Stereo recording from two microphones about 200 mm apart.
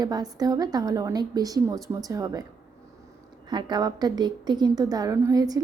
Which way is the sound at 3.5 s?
20° right (ahead or behind).